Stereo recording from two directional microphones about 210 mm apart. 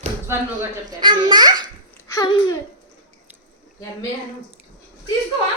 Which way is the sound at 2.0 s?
15° left (ahead or behind).